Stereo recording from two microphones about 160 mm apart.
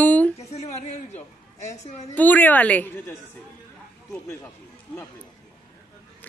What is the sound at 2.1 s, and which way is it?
Speech, 10° left (ahead or behind).